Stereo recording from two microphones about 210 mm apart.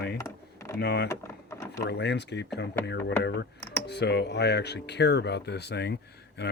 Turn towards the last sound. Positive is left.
turn(degrees=50)  # may be behind; listen again after turning